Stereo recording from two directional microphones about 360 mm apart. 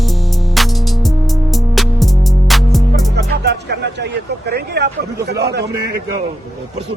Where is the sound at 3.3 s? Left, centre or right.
Right.